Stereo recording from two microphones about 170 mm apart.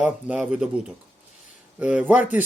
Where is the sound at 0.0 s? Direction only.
5° right (ahead or behind).